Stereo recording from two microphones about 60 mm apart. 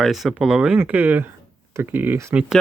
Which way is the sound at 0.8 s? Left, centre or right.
Right.